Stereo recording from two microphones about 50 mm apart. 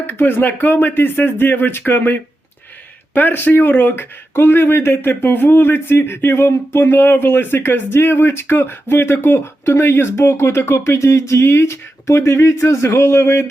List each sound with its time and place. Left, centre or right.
0.1 s speech: left